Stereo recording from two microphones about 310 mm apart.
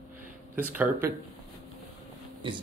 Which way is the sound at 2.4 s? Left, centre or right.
Centre.